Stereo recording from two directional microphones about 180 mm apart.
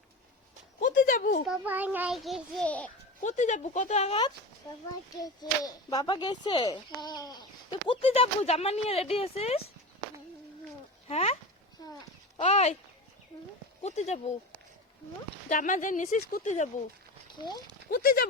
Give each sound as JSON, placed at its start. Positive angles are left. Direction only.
{"t": 0.8, "sound": "speech", "side_deg": 50}
{"t": 1.5, "sound": "a child's voice", "side_deg": -10}
{"t": 3.2, "sound": "speech", "side_deg": 40}
{"t": 5.2, "sound": "speech", "side_deg": 20}
{"t": 11.1, "sound": "speech", "side_deg": 35}
{"t": 11.8, "sound": "speech", "side_deg": 20}
{"t": 12.4, "sound": "speech", "side_deg": 35}
{"t": 13.8, "sound": "speech", "side_deg": 40}
{"t": 15.4, "sound": "speech", "side_deg": 45}
{"t": 17.3, "sound": "speech", "side_deg": 25}
{"t": 17.9, "sound": "speech", "side_deg": 55}